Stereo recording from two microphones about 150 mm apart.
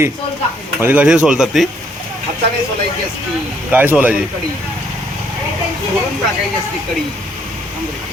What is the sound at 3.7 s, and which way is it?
Speech, 10° right (ahead or behind).